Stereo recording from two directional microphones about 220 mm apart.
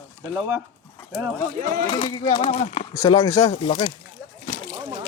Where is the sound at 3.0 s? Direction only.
15° left (ahead or behind).